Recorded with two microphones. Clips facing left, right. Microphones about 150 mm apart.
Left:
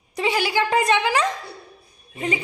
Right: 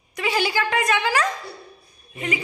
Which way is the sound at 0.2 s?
30° left (ahead or behind).